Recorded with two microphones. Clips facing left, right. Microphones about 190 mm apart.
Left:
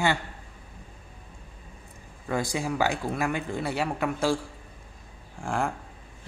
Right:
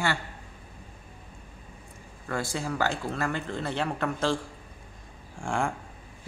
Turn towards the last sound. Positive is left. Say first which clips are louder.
# even
turn(degrees=0)  # may be behind; listen again after turning